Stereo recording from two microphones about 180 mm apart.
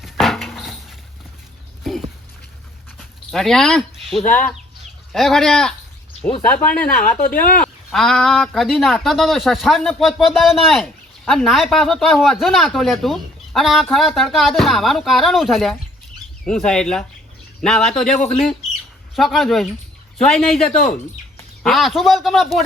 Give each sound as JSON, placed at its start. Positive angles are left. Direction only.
{"t": 0.0, "sound": "a sound", "side_deg": 0}
{"t": 3.3, "sound": "speech", "side_deg": 0}
{"t": 6.8, "sound": "speech", "side_deg": 55}
{"t": 7.6, "sound": "speech", "side_deg": 0}